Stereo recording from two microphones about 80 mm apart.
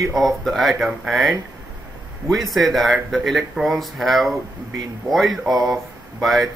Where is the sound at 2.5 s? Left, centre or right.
Centre.